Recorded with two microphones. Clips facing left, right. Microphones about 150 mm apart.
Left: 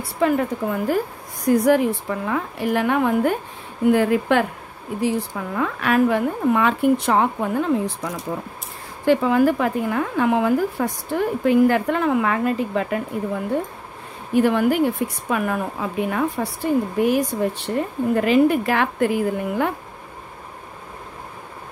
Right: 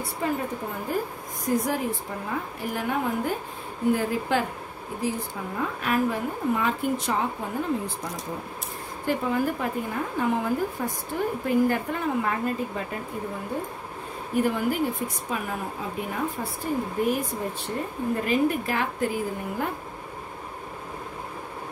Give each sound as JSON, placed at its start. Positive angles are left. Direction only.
{"t": 0.0, "sound": "a woman's voice", "side_deg": 80}
{"t": 1.4, "sound": "a woman's voice", "side_deg": 70}
{"t": 5.0, "sound": "a woman's voice", "side_deg": 90}
{"t": 14.3, "sound": "a woman's voice", "side_deg": 85}